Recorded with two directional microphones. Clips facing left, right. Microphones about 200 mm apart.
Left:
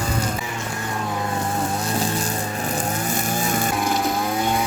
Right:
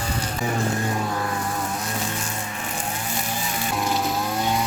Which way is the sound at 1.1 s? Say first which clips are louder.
Left 2 dB; 25° left (ahead or behind).